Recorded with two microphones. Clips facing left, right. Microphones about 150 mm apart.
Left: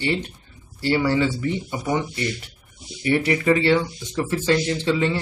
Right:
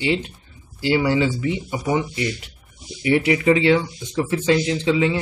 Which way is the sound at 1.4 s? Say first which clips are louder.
Right 1 dB; 15° right (ahead or behind).